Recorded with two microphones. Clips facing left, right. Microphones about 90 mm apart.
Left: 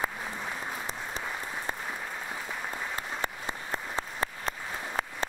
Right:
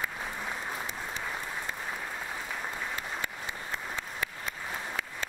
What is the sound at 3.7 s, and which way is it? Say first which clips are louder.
Applause: left 4 dB; 35° left (ahead or behind).